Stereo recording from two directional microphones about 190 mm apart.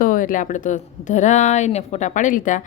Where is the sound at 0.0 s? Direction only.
45° left (ahead or behind).